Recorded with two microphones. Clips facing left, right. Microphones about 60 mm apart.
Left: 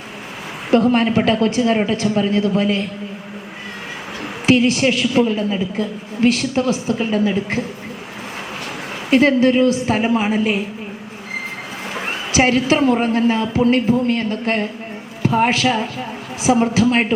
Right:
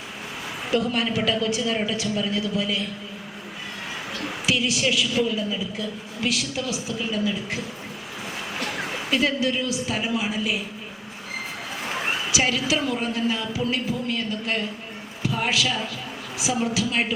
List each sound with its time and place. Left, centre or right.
0.7 s a woman's voice: left
4.4 s a woman's voice: left
9.0 s a woman's voice: left
12.3 s a woman's voice: left